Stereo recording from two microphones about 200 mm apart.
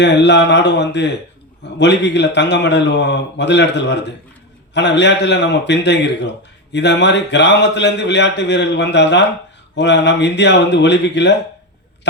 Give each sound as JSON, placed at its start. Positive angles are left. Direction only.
{"t": 0.0, "sound": "speech", "side_deg": 60}